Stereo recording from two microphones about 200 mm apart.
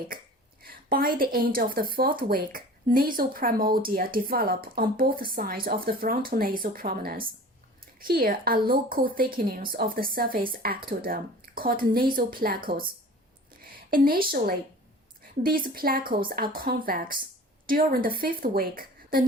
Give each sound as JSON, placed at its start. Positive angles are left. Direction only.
{"t": 0.6, "sound": "speech", "side_deg": -50}